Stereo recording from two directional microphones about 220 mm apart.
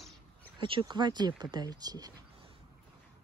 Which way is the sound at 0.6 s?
20° right (ahead or behind).